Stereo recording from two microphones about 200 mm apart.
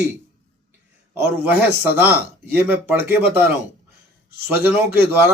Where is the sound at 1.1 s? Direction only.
10° right (ahead or behind).